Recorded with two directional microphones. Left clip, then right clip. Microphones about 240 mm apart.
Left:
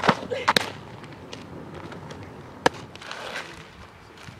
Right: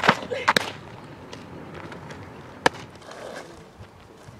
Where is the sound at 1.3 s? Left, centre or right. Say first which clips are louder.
Even; centre.